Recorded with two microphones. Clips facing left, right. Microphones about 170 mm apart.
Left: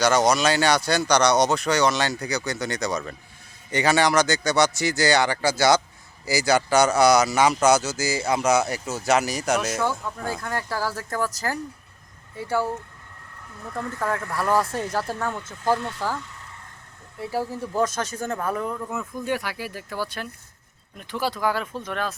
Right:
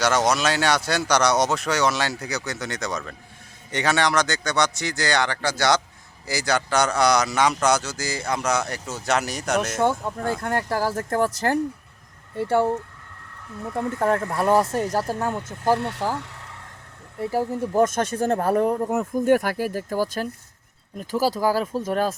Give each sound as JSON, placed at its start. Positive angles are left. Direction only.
{"t": 0.0, "sound": "speech", "side_deg": 0}
{"t": 9.8, "sound": "speech", "side_deg": -25}
{"t": 10.4, "sound": "speech", "side_deg": -55}
{"t": 13.7, "sound": "speech", "side_deg": -25}
{"t": 14.8, "sound": "speech", "side_deg": -40}
{"t": 15.6, "sound": "speech", "side_deg": -65}
{"t": 16.1, "sound": "vehicle", "side_deg": -75}
{"t": 17.5, "sound": "speech", "side_deg": -50}
{"t": 18.3, "sound": "speech", "side_deg": -40}